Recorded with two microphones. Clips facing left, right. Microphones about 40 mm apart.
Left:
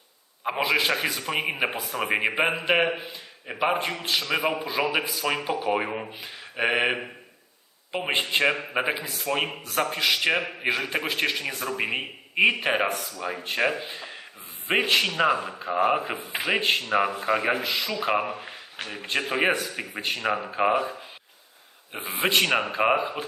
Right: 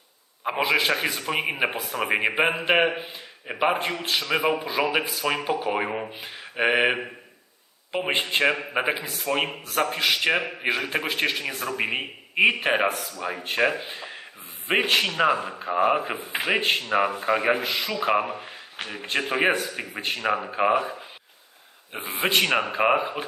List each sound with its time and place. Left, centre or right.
0.4 s a man's voice: centre
21.9 s a man's voice: centre